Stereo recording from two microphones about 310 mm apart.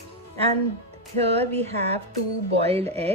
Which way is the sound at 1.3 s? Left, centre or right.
Centre.